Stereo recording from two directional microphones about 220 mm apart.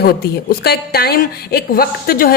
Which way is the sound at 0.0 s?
45° left (ahead or behind).